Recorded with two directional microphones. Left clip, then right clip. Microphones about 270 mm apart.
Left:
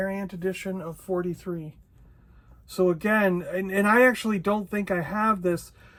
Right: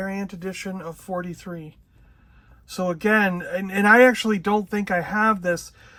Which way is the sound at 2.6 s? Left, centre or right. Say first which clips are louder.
Even; right.